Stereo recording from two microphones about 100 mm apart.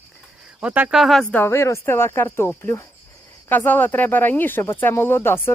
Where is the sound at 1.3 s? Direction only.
25° left (ahead or behind).